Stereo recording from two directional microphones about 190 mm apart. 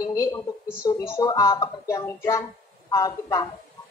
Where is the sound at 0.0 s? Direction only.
15° left (ahead or behind).